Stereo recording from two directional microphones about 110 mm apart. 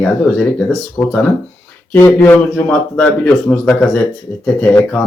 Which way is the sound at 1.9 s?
15° left (ahead or behind).